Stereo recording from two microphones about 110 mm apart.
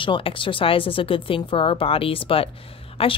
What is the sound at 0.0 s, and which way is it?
A woman's voice, 50° left (ahead or behind).